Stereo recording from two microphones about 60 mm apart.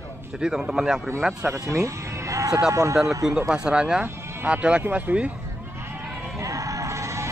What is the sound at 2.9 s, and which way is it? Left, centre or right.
Speech, centre.